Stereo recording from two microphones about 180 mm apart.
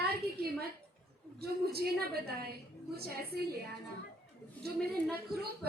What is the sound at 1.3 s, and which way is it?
A woman's voice, 60° right (ahead or behind).